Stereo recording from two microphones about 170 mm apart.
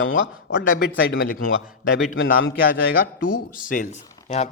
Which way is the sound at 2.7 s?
55° left (ahead or behind).